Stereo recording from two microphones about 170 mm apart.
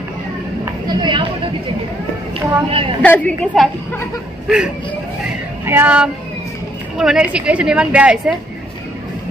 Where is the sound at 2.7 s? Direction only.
30° right (ahead or behind).